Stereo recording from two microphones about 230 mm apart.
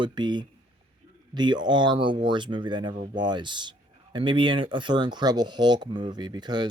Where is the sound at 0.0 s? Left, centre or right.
Centre.